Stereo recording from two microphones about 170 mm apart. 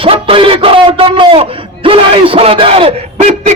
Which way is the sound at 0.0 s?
35° right (ahead or behind).